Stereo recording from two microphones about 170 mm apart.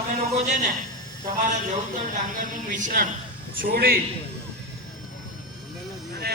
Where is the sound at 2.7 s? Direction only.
50° right (ahead or behind).